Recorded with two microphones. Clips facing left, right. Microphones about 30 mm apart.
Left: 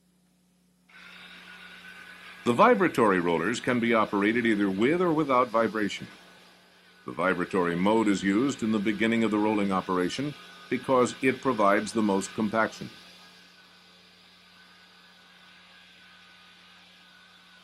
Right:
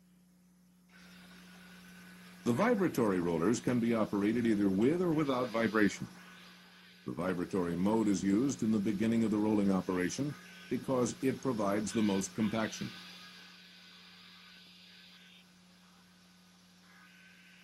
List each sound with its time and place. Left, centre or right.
1.0 s speech: left
5.1 s speech: left
5.9 s speech: left
12.5 s speech: left
12.8 s music: centre